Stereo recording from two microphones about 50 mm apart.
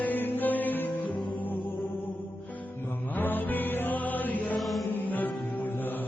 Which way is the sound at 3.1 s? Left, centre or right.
Left.